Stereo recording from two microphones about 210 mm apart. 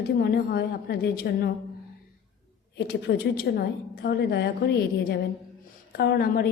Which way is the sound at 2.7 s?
50° left (ahead or behind).